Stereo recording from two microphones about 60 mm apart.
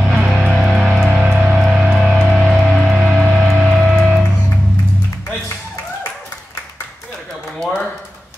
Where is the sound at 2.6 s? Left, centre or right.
Centre.